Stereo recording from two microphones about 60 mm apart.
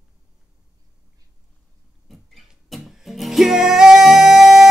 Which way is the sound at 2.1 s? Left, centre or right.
Centre.